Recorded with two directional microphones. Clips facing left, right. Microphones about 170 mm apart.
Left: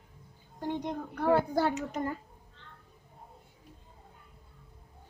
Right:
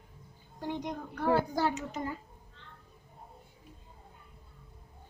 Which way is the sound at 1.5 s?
55° left (ahead or behind).